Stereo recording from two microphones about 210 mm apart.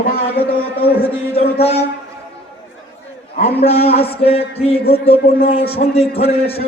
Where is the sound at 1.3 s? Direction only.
30° left (ahead or behind).